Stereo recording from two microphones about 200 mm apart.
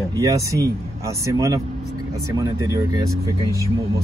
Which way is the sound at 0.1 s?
15° right (ahead or behind).